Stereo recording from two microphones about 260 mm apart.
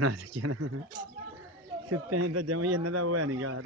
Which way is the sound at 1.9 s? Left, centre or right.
Right.